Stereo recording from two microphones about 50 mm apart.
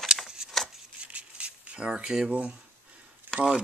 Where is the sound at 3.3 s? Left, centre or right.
Right.